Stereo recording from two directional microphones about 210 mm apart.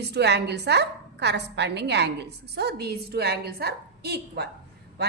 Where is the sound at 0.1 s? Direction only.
55° right (ahead or behind).